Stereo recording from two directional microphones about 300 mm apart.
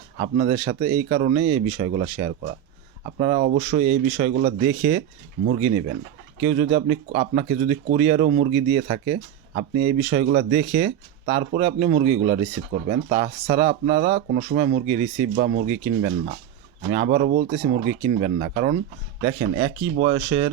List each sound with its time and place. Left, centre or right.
0.2 s speech: right
6.4 s speech: right